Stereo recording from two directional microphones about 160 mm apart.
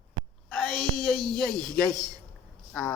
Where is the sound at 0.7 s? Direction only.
30° right (ahead or behind).